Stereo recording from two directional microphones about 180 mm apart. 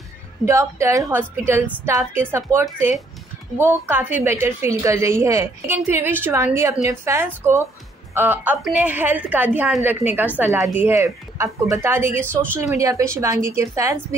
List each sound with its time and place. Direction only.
0.5 s a woman's voice: 15° right (ahead or behind)